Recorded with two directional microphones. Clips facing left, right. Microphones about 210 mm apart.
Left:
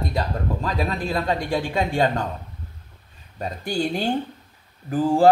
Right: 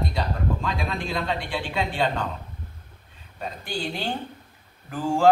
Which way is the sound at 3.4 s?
40° left (ahead or behind).